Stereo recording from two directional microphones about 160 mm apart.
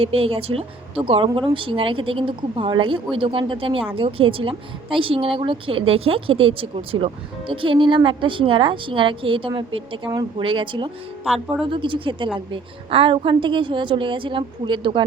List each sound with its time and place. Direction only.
0.0 s speech: 35° right (ahead or behind)